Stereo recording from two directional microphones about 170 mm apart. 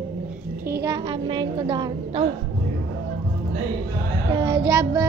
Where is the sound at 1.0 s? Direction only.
30° right (ahead or behind).